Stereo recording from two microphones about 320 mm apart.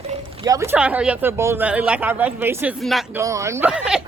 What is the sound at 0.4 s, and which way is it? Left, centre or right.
Speech, centre.